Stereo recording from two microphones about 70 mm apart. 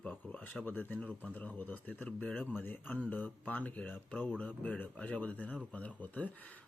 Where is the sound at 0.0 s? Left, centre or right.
Left.